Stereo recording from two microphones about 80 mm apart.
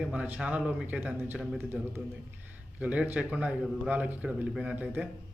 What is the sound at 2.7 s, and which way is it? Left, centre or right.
A man's voice, centre.